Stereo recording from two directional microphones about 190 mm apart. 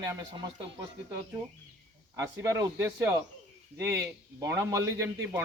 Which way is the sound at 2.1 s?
20° right (ahead or behind).